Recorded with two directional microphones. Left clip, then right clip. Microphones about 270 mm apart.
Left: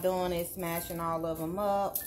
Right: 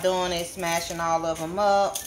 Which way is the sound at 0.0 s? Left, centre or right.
Centre.